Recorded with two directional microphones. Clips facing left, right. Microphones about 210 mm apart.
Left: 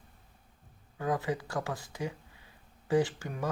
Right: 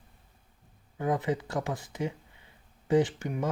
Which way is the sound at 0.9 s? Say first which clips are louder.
Right 3 dB; 20° right (ahead or behind).